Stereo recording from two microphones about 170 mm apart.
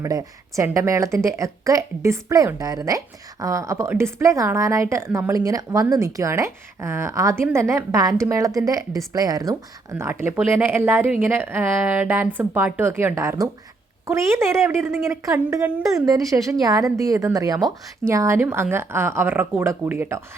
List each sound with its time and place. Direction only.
0.0 s a woman's voice: 20° right (ahead or behind)